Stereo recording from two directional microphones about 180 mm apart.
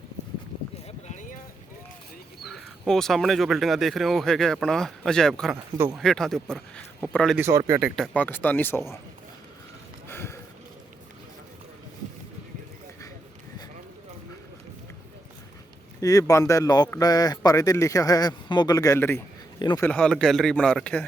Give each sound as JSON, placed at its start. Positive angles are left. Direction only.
{"t": 0.9, "sound": "a sound", "side_deg": 40}
{"t": 2.4, "sound": "speech", "side_deg": 0}
{"t": 5.7, "sound": "speech", "side_deg": -15}
{"t": 6.0, "sound": "speech", "side_deg": 0}
{"t": 7.3, "sound": "speech", "side_deg": -15}
{"t": 10.1, "sound": "a sound", "side_deg": 15}
{"t": 16.0, "sound": "speech", "side_deg": 20}
{"t": 19.5, "sound": "speech", "side_deg": 25}
{"t": 19.8, "sound": "speech", "side_deg": 5}